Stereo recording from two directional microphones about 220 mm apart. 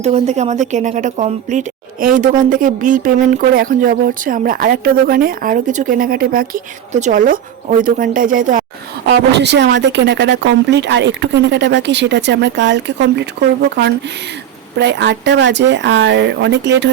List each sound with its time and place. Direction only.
0.0 s speech: 30° right (ahead or behind)
9.0 s speech: 50° right (ahead or behind)
14.8 s speech: 50° right (ahead or behind)